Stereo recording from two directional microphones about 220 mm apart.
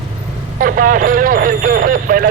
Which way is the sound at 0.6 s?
40° right (ahead or behind).